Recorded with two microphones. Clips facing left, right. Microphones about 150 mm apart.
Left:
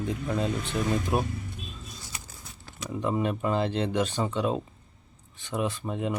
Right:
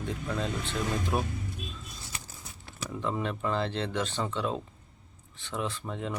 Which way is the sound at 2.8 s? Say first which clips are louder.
Left 4 dB; 15° left (ahead or behind).